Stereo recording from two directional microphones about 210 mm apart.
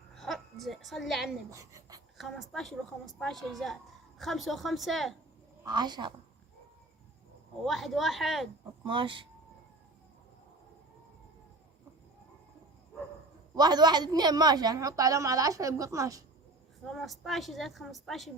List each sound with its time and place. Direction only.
0.2 s a sound: centre (ahead or behind)
1.5 s speech: 15° right (ahead or behind)
2.1 s a woman's voice: centre (ahead or behind)
5.6 s a woman's voice: 20° right (ahead or behind)
7.6 s a woman's voice: centre (ahead or behind)
8.8 s speech: 25° right (ahead or behind)
13.6 s a woman's voice: 20° right (ahead or behind)
16.8 s a woman's voice: centre (ahead or behind)